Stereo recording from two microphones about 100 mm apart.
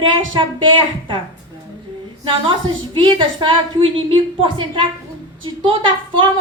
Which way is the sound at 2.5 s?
55° right (ahead or behind).